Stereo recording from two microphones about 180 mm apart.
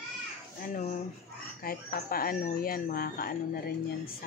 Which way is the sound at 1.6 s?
55° left (ahead or behind).